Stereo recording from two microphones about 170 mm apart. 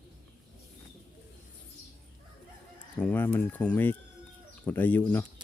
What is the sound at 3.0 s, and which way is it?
Speech, 10° left (ahead or behind).